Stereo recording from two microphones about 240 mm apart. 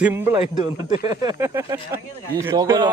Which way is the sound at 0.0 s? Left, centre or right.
Centre.